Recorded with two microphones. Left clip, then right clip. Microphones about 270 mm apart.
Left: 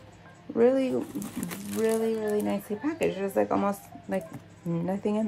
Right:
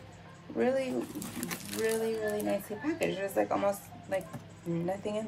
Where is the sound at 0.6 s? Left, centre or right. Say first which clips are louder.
Left 7 dB; left.